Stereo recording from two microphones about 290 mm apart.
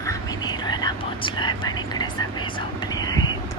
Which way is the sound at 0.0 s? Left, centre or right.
Centre.